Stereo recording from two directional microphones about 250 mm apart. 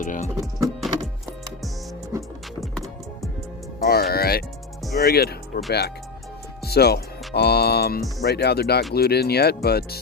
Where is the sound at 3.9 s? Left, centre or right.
Left.